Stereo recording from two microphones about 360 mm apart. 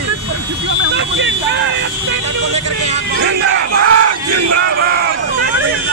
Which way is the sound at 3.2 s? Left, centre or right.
Right.